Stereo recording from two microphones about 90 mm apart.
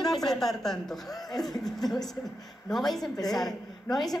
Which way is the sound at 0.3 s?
5° left (ahead or behind).